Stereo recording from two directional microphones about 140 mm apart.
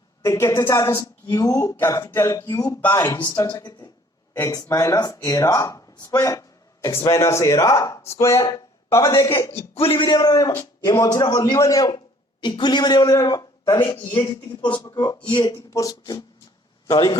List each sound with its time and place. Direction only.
0.3 s speech: 20° left (ahead or behind)
1.7 s a sound: 20° left (ahead or behind)
2.9 s speech: 20° left (ahead or behind)
3.2 s a man's voice: 30° left (ahead or behind)
9.7 s a man's voice: 40° left (ahead or behind); by 16.2 s 25° left (ahead or behind)